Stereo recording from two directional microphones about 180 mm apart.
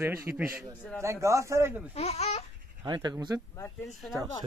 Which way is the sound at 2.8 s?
25° right (ahead or behind).